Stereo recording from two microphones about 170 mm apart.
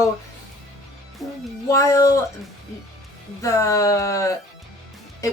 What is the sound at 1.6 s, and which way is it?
Speech, 20° left (ahead or behind).